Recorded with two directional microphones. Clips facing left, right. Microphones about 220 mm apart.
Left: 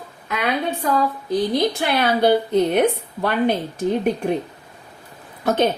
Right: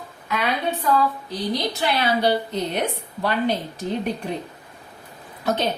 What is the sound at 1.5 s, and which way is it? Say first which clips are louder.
A woman's voice: left 4 dB; 55° left (ahead or behind).